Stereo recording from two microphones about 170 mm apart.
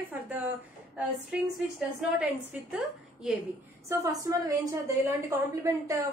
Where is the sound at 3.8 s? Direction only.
20° right (ahead or behind).